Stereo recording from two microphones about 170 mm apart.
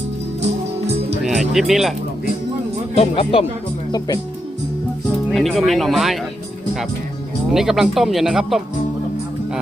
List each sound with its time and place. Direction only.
1.2 s speech: 5° right (ahead or behind)
2.9 s speech: 35° left (ahead or behind)
5.3 s speech: centre (ahead or behind)
7.5 s speech: 5° right (ahead or behind)